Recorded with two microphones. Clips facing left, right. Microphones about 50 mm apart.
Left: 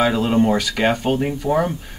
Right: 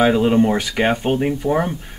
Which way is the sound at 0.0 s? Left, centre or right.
Centre.